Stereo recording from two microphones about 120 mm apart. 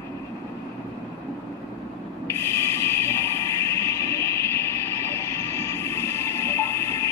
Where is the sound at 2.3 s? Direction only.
20° left (ahead or behind).